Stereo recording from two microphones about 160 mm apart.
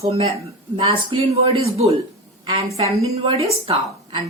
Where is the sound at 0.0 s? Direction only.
35° right (ahead or behind).